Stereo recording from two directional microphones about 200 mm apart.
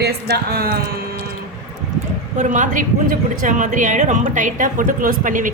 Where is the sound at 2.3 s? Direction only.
40° right (ahead or behind).